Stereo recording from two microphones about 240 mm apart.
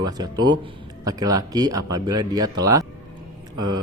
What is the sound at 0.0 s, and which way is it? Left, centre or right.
Speech, centre.